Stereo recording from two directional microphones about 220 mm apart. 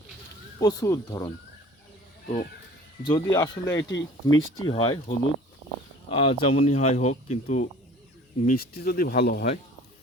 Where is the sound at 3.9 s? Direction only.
60° left (ahead or behind).